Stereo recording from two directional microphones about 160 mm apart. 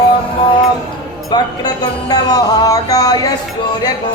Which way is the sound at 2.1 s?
25° left (ahead or behind).